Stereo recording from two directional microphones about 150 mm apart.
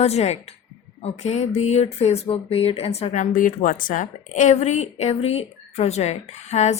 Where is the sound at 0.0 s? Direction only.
45° left (ahead or behind).